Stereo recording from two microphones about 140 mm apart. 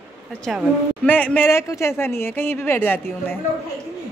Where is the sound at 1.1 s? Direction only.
10° left (ahead or behind).